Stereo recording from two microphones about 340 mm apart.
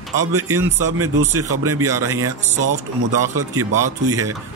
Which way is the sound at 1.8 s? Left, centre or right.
Centre.